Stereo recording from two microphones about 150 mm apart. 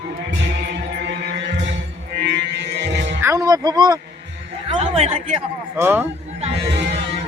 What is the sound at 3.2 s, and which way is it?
Music, 20° right (ahead or behind).